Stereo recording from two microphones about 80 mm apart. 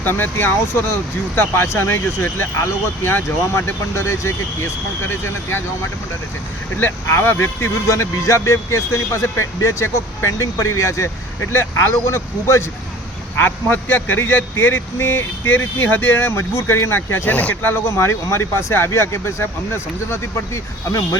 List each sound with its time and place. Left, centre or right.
0.0 s a man's voice: left
6.7 s a man's voice: left
17.9 s speech: left